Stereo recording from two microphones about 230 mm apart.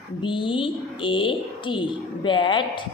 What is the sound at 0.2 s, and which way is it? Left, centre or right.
Speech, left.